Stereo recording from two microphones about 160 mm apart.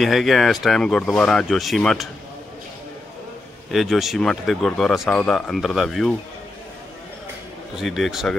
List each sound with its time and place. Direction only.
0.0 s speech: centre (ahead or behind)
3.7 s speech: centre (ahead or behind)
7.7 s speech: centre (ahead or behind)